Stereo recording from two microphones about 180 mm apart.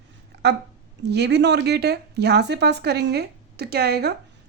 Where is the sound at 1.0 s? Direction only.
70° right (ahead or behind).